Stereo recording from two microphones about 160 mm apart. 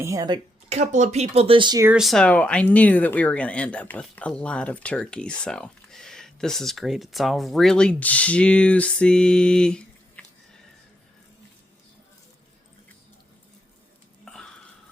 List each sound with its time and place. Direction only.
0.0 s speech: 20° right (ahead or behind)
0.7 s speech: 45° right (ahead or behind); by 1.8 s 30° right (ahead or behind)
2.0 s speech: centre (ahead or behind)